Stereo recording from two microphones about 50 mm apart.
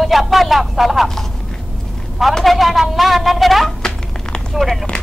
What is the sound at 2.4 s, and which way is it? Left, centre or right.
A woman's voice, centre.